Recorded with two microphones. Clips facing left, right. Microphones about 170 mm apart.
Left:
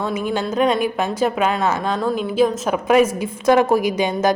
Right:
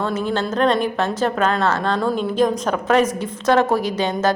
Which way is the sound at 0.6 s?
10° left (ahead or behind).